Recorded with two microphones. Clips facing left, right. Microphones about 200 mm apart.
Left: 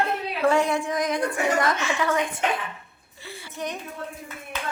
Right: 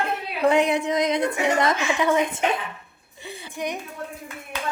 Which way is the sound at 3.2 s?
20° right (ahead or behind).